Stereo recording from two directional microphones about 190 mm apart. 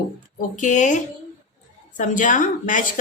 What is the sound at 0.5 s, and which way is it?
A woman's voice, 40° left (ahead or behind).